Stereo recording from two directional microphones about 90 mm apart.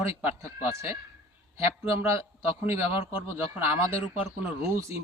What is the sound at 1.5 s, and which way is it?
A man's voice, 30° right (ahead or behind).